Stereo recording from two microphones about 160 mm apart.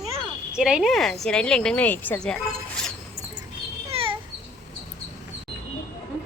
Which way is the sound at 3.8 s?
35° right (ahead or behind).